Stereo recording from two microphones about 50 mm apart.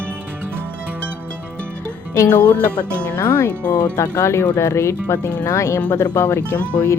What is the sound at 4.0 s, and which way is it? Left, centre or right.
Speech, left.